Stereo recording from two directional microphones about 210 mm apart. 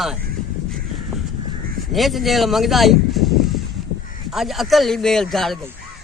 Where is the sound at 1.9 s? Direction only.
Centre (ahead or behind).